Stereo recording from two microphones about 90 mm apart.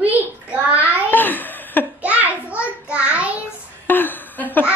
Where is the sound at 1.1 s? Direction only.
20° left (ahead or behind).